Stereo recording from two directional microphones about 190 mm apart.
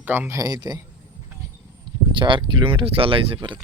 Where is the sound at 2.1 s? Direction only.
25° right (ahead or behind).